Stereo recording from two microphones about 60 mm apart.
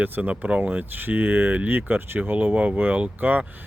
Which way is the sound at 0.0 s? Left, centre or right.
Right.